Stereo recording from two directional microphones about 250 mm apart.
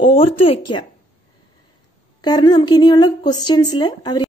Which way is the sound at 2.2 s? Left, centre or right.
Centre.